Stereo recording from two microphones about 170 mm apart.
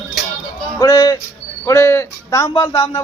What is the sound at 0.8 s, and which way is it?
Speech, 20° left (ahead or behind).